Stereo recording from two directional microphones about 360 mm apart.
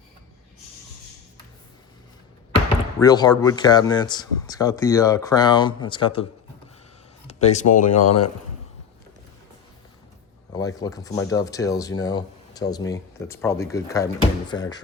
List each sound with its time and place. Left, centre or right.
3.0 s speech: centre
7.4 s speech: centre
7.9 s speech: left
10.5 s speech: centre